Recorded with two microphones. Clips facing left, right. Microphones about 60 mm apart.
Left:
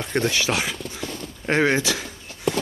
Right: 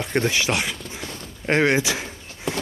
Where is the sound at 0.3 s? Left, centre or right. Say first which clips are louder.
Even; centre.